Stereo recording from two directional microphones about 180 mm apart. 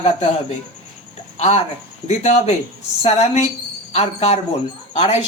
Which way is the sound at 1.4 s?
40° left (ahead or behind).